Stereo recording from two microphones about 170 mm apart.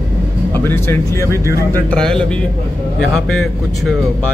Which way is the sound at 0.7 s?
15° left (ahead or behind).